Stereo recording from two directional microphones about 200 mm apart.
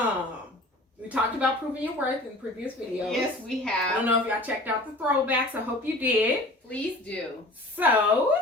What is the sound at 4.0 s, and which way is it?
A woman's voice, 10° right (ahead or behind).